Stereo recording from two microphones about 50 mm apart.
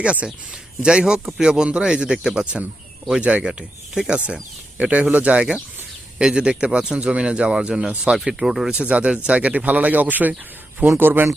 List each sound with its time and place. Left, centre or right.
0.0 s speech: right
4.8 s speech: right
6.1 s speech: centre
8.2 s speech: centre
8.7 s speech: right